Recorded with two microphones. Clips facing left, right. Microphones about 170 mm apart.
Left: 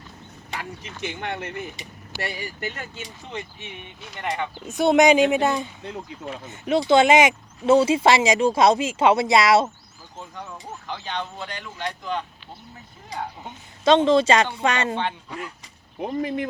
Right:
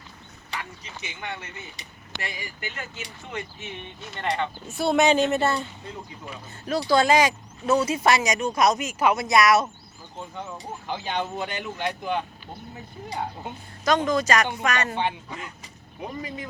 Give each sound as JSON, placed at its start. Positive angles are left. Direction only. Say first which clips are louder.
{"t": 1.0, "sound": "speech", "louder": "left 7 dB", "side_deg": 55}
{"t": 2.2, "sound": "speech", "louder": "left 6 dB", "side_deg": 35}
{"t": 4.1, "sound": "speech", "louder": "right 1 dB", "side_deg": 10}
{"t": 5.8, "sound": "speech", "louder": "left 5 dB", "side_deg": 65}
{"t": 6.5, "sound": "speech", "louder": "left 4 dB", "side_deg": 20}
{"t": 10.4, "sound": "speech", "louder": "even", "side_deg": -10}
{"t": 13.8, "sound": "speech", "louder": "left 6 dB", "side_deg": 25}
{"t": 16.0, "sound": "speech", "louder": "left 8 dB", "side_deg": 55}